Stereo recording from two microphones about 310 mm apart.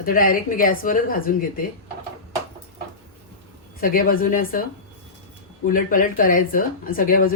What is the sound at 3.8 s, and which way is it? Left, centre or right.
Speech, left.